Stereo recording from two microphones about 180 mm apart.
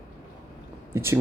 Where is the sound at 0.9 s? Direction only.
15° right (ahead or behind).